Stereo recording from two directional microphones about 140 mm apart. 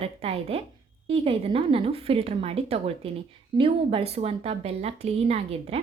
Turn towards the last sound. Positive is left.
turn(degrees=-45)  # may be behind; listen again after turning